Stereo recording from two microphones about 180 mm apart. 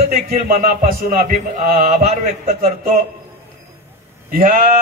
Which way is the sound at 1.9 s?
40° right (ahead or behind).